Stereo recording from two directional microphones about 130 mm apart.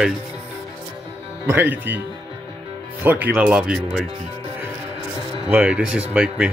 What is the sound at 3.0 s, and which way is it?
Speech, 15° right (ahead or behind).